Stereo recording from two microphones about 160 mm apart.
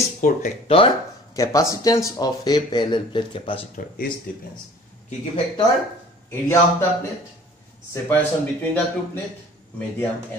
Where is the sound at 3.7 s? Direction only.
60° left (ahead or behind).